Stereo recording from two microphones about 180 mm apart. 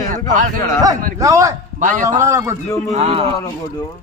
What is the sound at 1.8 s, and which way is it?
Speech, 45° right (ahead or behind).